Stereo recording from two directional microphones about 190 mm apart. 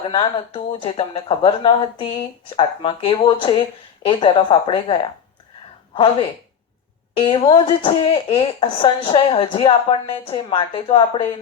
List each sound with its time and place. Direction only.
0.1 s speech: 25° left (ahead or behind)